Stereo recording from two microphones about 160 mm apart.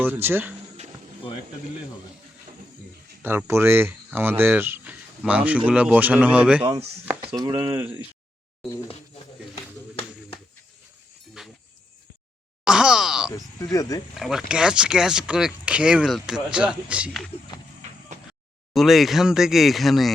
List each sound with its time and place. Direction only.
0.0 s speech: 10° right (ahead or behind)
3.2 s speech: 15° right (ahead or behind)
7.0 s chop: 10° right (ahead or behind)
7.3 s speech: 25° right (ahead or behind)
11.4 s a sound: centre (ahead or behind)
12.6 s groan: 5° right (ahead or behind)
13.3 s speech: 20° left (ahead or behind)
14.2 s speech: 5° right (ahead or behind)
18.7 s speech: centre (ahead or behind)